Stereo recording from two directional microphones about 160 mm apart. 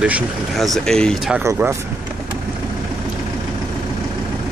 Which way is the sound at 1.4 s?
15° right (ahead or behind).